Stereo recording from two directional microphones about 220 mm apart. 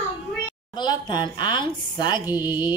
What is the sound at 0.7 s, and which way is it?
Speech, 20° left (ahead or behind).